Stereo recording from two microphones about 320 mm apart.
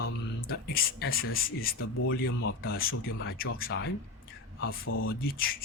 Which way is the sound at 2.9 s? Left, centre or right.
Left.